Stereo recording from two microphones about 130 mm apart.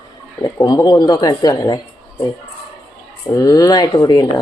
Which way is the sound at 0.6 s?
30° left (ahead or behind).